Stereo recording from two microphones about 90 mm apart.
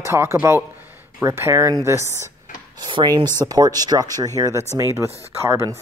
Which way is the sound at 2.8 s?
55° right (ahead or behind).